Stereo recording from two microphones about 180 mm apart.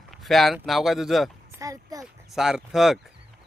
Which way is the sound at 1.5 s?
20° right (ahead or behind).